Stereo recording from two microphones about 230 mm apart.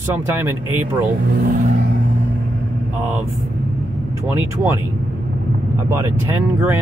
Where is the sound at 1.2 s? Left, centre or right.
Right.